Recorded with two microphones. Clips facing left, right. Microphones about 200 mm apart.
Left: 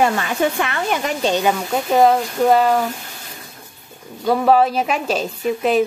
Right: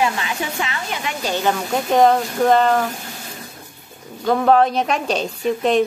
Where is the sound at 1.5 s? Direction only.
5° left (ahead or behind).